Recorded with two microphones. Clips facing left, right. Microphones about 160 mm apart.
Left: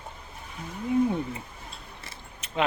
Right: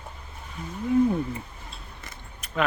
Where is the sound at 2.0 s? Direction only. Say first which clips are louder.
Even; 30° left (ahead or behind).